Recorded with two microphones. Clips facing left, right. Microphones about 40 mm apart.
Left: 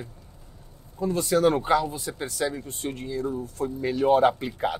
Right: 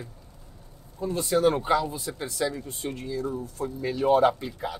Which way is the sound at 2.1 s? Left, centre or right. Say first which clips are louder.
Left 1 dB; centre.